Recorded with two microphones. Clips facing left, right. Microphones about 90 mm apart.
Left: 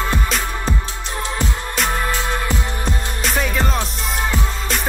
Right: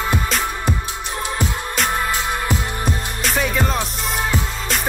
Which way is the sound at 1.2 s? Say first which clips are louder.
Even; 15° right (ahead or behind).